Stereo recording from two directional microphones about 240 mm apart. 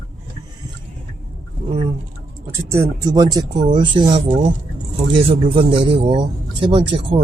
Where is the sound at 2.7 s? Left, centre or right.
Centre.